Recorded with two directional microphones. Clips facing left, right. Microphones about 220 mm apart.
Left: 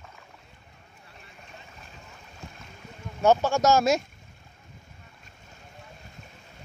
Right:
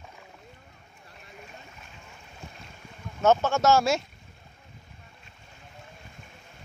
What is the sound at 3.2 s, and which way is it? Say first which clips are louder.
Speech: left 1 dB; 15° left (ahead or behind).